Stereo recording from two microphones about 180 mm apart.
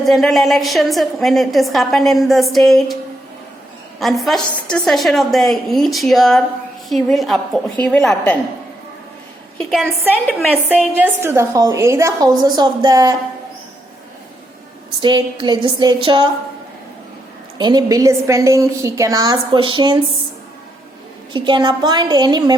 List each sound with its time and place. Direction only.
0.0 s a woman's voice: centre (ahead or behind)
4.0 s a woman's voice: centre (ahead or behind)
9.6 s a woman's voice: centre (ahead or behind); by 13.1 s 20° right (ahead or behind)
15.0 s a woman's voice: 25° right (ahead or behind)
17.6 s a woman's voice: 25° right (ahead or behind)
21.3 s a woman's voice: 25° right (ahead or behind)